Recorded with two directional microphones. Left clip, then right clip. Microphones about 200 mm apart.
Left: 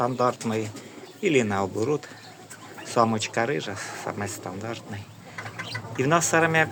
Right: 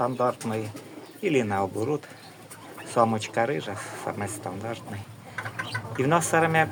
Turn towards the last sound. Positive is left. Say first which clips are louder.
# left 1 dB
turn(degrees=5)  # may be behind; listen again after turning